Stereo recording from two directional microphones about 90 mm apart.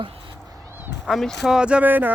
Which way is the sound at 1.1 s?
Centre (ahead or behind).